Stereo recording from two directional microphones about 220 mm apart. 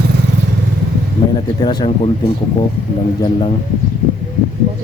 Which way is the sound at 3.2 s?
25° left (ahead or behind).